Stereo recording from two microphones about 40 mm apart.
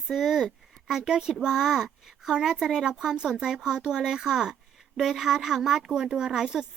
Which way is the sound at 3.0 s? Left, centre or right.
Centre.